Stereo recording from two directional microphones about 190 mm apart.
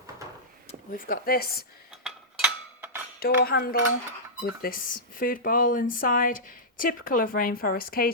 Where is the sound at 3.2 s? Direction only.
50° left (ahead or behind).